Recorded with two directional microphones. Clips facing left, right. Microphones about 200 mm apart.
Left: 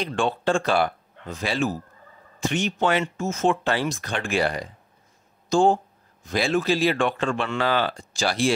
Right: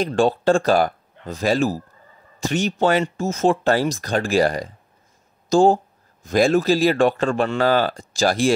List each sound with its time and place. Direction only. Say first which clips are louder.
0.0 s speech: right 6 dB; 40° right (ahead or behind)